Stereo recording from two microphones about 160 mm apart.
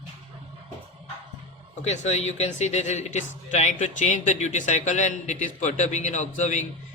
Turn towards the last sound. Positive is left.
turn(degrees=50)  # may be behind; listen again after turning